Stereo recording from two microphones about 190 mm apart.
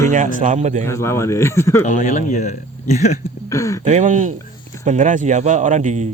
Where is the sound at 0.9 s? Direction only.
15° left (ahead or behind).